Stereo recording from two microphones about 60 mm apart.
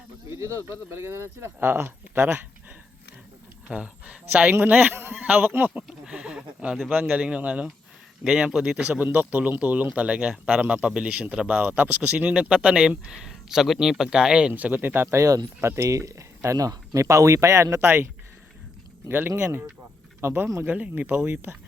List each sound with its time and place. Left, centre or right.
0.3 s speech: right
3.7 s speech: centre; by 5.7 s right
6.1 s a sound: centre
6.9 s speech: right
14.5 s speech: right
15.1 s speech: right
17.8 s speech: right
19.4 s speech: right
20.7 s speech: right
21.2 s speech: right